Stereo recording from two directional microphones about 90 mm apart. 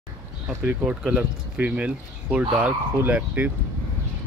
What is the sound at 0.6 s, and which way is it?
Speech, 15° right (ahead or behind).